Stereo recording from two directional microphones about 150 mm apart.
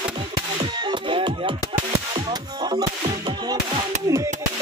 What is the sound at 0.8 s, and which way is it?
Music, 30° right (ahead or behind).